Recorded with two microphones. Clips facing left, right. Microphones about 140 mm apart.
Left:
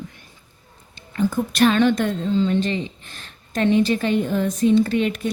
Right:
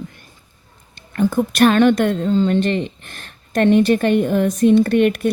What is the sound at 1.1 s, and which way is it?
A woman's voice, 60° right (ahead or behind).